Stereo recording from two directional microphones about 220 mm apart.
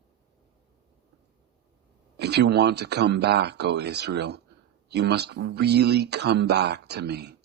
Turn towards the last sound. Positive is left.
turn(degrees=-50)  # may be behind; listen again after turning